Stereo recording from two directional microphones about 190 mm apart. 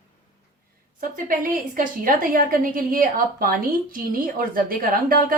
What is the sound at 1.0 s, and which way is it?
A woman's voice, 45° right (ahead or behind).